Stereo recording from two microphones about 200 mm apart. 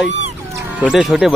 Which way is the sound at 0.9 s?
5° right (ahead or behind).